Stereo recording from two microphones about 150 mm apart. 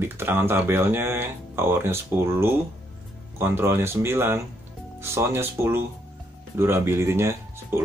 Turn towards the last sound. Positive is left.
turn(degrees=-15)  # may be behind; listen again after turning